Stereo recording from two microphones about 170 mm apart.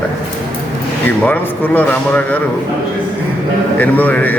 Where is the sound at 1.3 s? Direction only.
10° left (ahead or behind).